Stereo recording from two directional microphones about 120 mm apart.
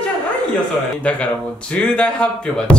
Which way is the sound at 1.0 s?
10° left (ahead or behind).